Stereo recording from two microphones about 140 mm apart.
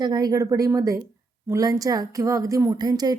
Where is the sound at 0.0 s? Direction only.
30° right (ahead or behind).